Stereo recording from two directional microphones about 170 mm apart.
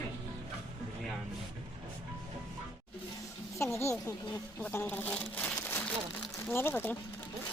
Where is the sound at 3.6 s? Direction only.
15° left (ahead or behind).